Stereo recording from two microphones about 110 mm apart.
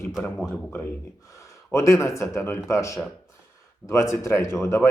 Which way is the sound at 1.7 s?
25° left (ahead or behind).